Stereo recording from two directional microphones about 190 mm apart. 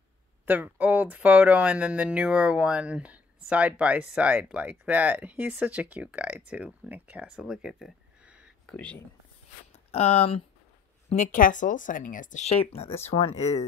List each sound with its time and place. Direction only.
0.5 s speech: 10° right (ahead or behind)
8.7 s speech: 5° left (ahead or behind)
9.7 s speech: 35° left (ahead or behind)